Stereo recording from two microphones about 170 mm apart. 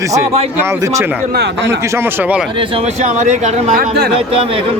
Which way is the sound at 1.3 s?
85° right.